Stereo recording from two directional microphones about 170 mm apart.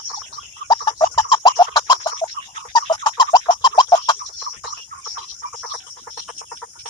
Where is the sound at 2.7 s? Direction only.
25° left (ahead or behind).